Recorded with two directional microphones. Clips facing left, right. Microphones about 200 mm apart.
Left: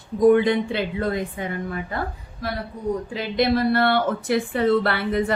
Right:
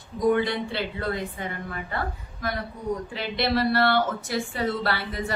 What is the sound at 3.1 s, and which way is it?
A woman's voice, 45° left (ahead or behind).